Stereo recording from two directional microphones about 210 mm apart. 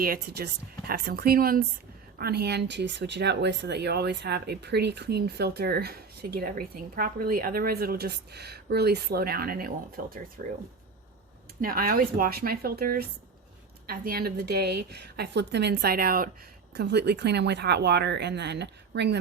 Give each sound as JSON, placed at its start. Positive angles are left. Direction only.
{"t": 0.0, "sound": "speech", "side_deg": -50}
{"t": 11.6, "sound": "speech", "side_deg": -45}
{"t": 16.7, "sound": "speech", "side_deg": -55}